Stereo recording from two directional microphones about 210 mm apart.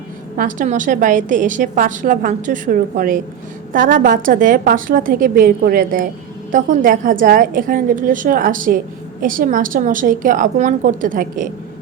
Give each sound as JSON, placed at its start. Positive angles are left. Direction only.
{"t": 0.3, "sound": "a woman's voice", "side_deg": -40}